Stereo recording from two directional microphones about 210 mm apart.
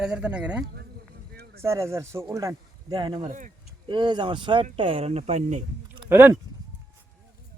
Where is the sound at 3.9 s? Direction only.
20° right (ahead or behind).